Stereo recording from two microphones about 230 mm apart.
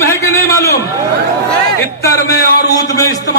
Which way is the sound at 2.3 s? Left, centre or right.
Left.